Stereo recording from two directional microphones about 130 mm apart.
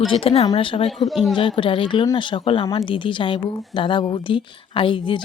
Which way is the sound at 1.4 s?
40° left (ahead or behind).